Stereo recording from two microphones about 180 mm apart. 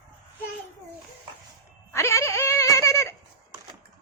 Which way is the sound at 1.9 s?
15° left (ahead or behind).